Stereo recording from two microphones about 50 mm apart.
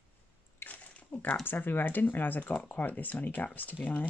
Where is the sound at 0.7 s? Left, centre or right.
Left.